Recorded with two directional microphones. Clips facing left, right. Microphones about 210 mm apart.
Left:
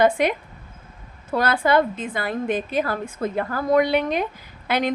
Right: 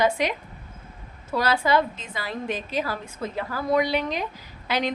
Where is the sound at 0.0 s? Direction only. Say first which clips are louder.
Left 5 dB; 55° left (ahead or behind).